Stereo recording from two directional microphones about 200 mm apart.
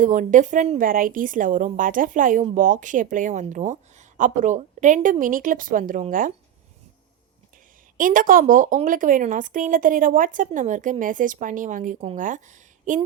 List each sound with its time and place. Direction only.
0.0 s a woman's voice: 40° right (ahead or behind)
7.9 s a woman's voice: 45° right (ahead or behind)